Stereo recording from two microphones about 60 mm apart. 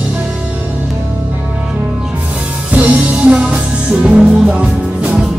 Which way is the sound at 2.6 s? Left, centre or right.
Right.